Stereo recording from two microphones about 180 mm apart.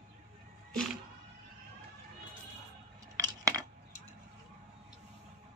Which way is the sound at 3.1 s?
20° right (ahead or behind).